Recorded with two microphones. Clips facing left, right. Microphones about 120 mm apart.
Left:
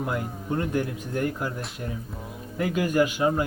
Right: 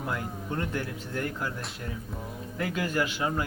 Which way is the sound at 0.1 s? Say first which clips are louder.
Left 4 dB; 20° left (ahead or behind).